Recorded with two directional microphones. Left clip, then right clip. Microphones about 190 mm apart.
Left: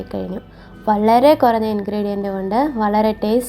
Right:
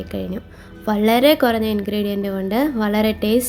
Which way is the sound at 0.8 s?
35° right (ahead or behind).